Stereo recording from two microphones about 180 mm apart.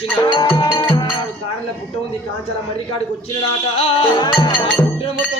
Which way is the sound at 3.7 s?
30° left (ahead or behind).